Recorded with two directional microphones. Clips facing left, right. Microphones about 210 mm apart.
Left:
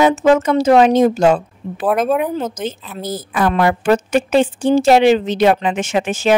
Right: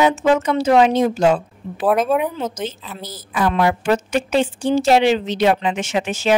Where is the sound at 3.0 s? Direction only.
50° left (ahead or behind).